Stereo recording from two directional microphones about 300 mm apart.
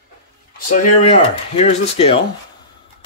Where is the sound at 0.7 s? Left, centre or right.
Left.